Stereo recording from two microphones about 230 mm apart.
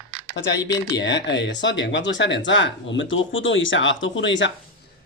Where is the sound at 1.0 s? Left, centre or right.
Left.